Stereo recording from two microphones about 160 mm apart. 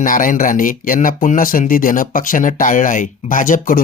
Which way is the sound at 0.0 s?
55° left (ahead or behind).